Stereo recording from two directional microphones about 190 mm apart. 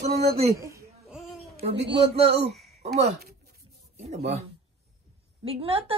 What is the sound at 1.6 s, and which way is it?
Speech, 30° right (ahead or behind).